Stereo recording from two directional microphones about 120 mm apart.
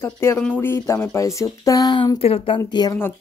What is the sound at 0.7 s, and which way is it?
Speech, 25° left (ahead or behind).